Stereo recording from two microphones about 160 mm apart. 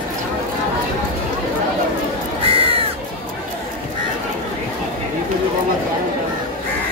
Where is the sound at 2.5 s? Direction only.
35° right (ahead or behind).